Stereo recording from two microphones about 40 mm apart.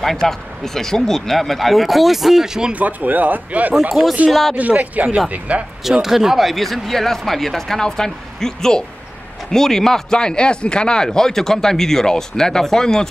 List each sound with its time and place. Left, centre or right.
0.0 s speech: centre
2.7 s speech: right
4.0 s speech: right
4.3 s speech: centre
4.6 s speech: right
6.0 s speech: centre